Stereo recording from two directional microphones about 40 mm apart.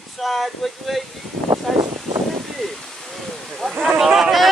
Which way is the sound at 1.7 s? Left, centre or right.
Centre.